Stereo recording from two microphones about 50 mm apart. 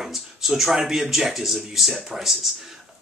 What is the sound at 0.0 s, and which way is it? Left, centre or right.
Speech, centre.